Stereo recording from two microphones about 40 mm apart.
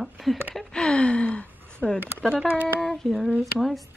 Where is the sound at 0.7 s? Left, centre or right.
Left.